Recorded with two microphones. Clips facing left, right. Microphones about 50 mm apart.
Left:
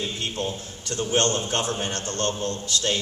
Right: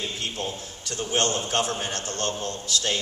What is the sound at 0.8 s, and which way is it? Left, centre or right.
Speech, left.